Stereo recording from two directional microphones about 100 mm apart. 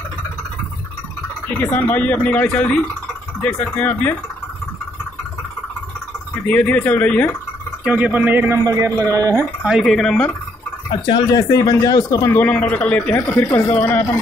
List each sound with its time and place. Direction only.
1.5 s speech: 15° left (ahead or behind)
6.4 s speech: 15° left (ahead or behind)
7.8 s speech: 15° right (ahead or behind)
8.6 s a man's voice: 40° right (ahead or behind)
9.6 s speech: 5° right (ahead or behind)
11.3 s speech: 35° left (ahead or behind)
12.3 s speech: 15° left (ahead or behind)